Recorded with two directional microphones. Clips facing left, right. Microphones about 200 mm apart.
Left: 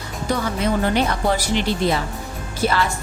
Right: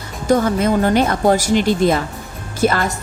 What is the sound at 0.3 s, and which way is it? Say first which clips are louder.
Speech: right 7 dB; 45° right (ahead or behind).